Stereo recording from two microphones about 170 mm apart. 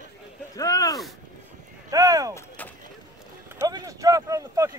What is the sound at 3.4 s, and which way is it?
Clip-clop, 15° right (ahead or behind).